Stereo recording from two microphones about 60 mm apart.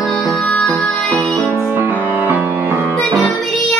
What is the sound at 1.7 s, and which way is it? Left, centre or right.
Music, right.